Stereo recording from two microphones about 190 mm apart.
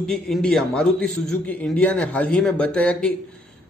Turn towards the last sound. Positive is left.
turn(degrees=5)  # may be behind; listen again after turning